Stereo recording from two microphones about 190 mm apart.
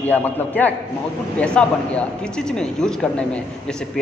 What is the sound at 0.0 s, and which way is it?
A man's voice, 10° left (ahead or behind).